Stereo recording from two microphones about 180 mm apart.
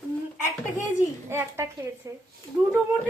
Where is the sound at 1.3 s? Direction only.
15° right (ahead or behind).